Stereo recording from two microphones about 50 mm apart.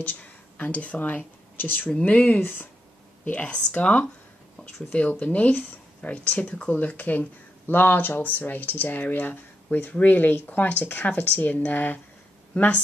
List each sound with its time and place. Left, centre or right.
0.0 s speech: left
2.0 s speech: left
2.4 s speech: left
3.8 s speech: left
5.2 s speech: left